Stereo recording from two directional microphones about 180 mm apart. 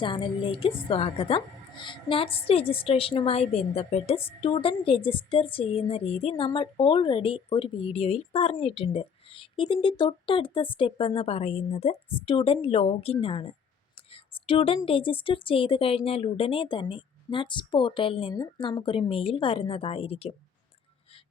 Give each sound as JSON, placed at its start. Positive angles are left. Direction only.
{"t": 0.0, "sound": "a woman's voice", "side_deg": 30}
{"t": 14.1, "sound": "a sound", "side_deg": 30}
{"t": 14.8, "sound": "a woman's voice", "side_deg": 30}